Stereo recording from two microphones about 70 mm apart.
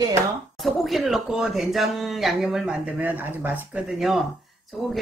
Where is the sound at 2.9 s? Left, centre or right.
Right.